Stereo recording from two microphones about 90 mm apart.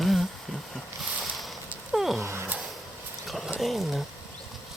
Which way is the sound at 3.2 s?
Centre (ahead or behind).